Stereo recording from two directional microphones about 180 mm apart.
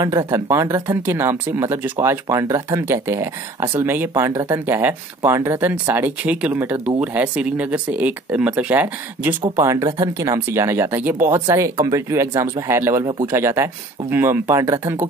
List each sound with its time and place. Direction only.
0.0 s speech: 20° right (ahead or behind)